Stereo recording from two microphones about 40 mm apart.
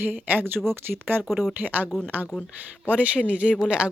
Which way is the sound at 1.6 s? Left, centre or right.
Right.